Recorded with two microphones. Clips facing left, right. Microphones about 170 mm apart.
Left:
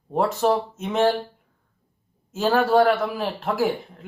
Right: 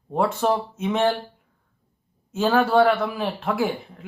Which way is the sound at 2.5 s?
40° left (ahead or behind).